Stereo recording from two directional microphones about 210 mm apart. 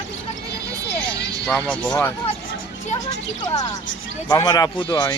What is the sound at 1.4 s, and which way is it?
Speech, 5° left (ahead or behind).